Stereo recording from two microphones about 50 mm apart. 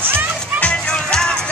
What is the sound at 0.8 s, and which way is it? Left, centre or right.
Music, centre.